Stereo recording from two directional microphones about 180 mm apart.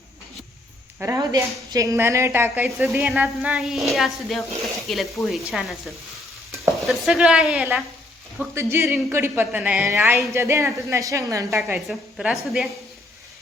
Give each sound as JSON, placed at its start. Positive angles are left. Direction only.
{"t": 0.9, "sound": "a woman's voice", "side_deg": -15}
{"t": 2.6, "sound": "speech", "side_deg": 0}
{"t": 8.5, "sound": "a woman's voice", "side_deg": -15}
{"t": 11.9, "sound": "speech", "side_deg": 0}